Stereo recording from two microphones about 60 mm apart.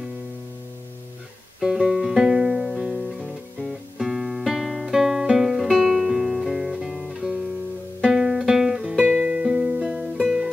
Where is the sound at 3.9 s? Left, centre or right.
Centre.